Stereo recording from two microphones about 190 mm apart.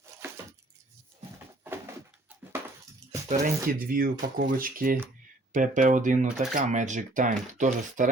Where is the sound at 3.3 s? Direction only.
50° right (ahead or behind).